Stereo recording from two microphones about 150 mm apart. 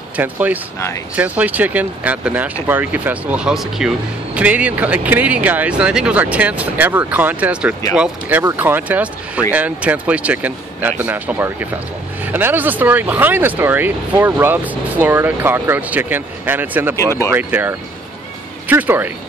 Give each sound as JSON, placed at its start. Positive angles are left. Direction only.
{"t": 0.1, "sound": "speech", "side_deg": -10}
{"t": 16.9, "sound": "speech", "side_deg": 20}
{"t": 17.4, "sound": "speech", "side_deg": -10}